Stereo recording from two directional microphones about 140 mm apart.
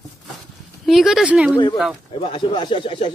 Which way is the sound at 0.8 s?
Centre (ahead or behind).